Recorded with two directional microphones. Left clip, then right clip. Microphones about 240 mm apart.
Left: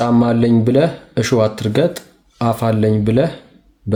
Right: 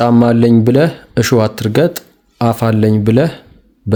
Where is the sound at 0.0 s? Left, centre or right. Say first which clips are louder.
Right 4 dB; right.